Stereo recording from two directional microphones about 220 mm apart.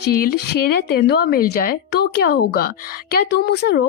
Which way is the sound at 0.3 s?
45° left (ahead or behind).